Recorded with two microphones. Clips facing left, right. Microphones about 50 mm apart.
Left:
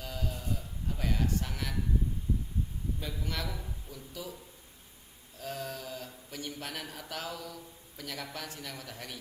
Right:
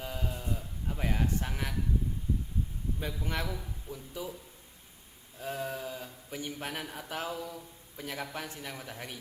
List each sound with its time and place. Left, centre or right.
0.0 s a sound: right
3.2 s speech: right
5.4 s speech: right